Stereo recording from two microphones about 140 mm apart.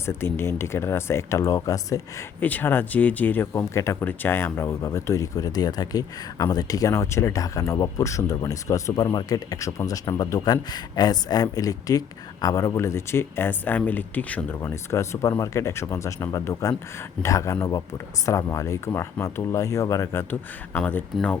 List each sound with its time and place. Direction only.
0.0 s speech: 15° left (ahead or behind)
2.4 s speech: 15° left (ahead or behind)
20.7 s speech: 10° left (ahead or behind)